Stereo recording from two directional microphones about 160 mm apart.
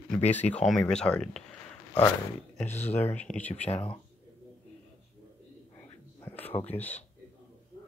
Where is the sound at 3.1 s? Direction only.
10° left (ahead or behind).